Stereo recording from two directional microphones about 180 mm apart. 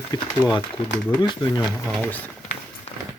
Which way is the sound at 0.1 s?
20° left (ahead or behind).